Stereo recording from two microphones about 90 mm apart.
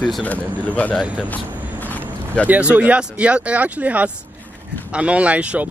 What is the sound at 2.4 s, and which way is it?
Speech, 15° right (ahead or behind).